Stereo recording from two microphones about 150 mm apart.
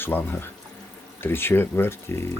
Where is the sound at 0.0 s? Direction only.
15° left (ahead or behind).